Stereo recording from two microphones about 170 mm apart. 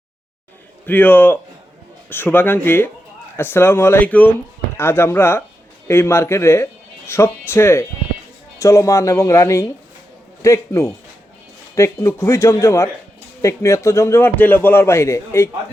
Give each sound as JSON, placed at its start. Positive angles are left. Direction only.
{"t": 0.9, "sound": "a man's voice", "side_deg": 10}